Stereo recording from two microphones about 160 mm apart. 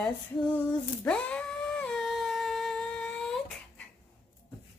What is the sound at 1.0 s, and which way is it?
Humming, 5° left (ahead or behind).